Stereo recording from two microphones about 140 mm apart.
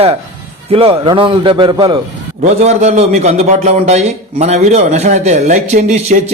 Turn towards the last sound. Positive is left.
turn(degrees=-55)  # may be behind; listen again after turning